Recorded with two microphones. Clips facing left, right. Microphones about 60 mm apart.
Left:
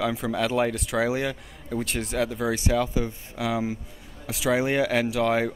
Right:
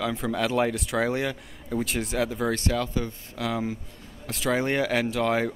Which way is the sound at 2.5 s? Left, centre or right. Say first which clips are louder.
Left 2 dB; centre.